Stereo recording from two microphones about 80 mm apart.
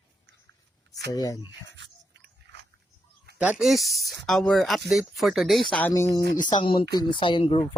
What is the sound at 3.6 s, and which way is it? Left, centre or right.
Speech, centre.